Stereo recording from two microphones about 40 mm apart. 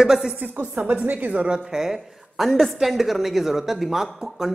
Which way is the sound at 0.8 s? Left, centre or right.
Right.